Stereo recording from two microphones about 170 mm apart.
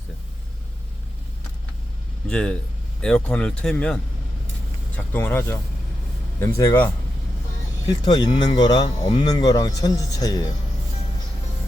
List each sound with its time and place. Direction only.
2.2 s a man's voice: 5° left (ahead or behind)
8.0 s speech: 25° left (ahead or behind)